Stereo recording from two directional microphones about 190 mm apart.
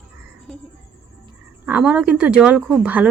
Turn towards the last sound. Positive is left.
turn(degrees=-5)  # may be behind; listen again after turning